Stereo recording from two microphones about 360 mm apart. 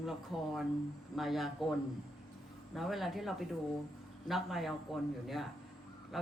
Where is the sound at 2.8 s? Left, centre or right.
Centre.